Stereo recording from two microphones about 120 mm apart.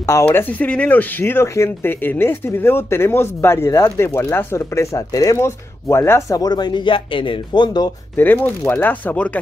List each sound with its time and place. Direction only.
0.2 s speech: 15° left (ahead or behind); by 7.9 s 35° left (ahead or behind)
8.2 s speech: 15° left (ahead or behind)